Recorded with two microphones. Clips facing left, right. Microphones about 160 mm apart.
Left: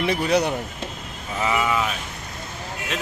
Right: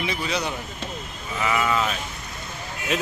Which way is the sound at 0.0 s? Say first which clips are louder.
Left 6 dB; 60° left (ahead or behind).